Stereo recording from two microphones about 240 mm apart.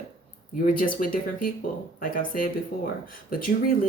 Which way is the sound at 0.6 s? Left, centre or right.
Left.